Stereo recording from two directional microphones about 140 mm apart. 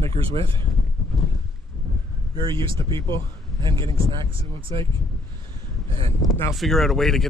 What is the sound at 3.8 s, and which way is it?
Speech, 40° right (ahead or behind).